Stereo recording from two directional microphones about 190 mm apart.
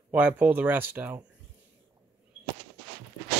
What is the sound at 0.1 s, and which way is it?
Speech, 10° right (ahead or behind).